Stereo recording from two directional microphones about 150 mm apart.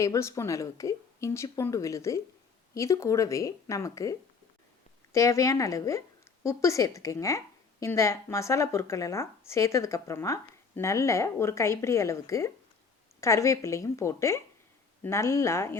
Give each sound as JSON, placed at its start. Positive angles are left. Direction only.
{"t": 0.0, "sound": "a woman's voice", "side_deg": 20}